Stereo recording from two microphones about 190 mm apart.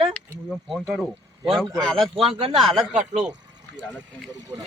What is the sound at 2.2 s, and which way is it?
Speech, 30° right (ahead or behind).